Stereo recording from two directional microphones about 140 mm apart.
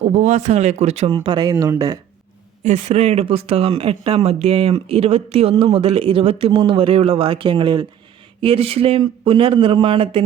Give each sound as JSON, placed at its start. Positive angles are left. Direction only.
{"t": 0.0, "sound": "speech", "side_deg": -55}
{"t": 2.6, "sound": "a man's voice", "side_deg": -50}